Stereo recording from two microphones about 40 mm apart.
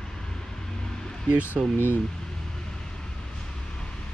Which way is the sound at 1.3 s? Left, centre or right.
Right.